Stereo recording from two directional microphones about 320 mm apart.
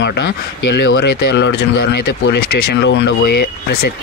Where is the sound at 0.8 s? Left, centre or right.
Left.